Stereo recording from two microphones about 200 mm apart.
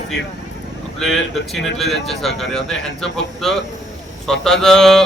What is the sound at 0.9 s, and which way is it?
Speech, centre (ahead or behind).